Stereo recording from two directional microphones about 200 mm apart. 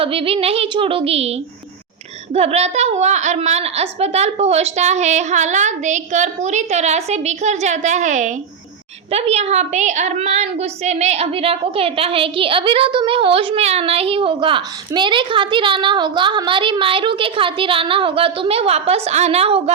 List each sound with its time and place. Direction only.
0.0 s a woman's voice: 30° right (ahead or behind)